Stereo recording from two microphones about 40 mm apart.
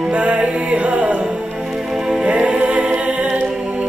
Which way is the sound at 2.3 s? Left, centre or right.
Right.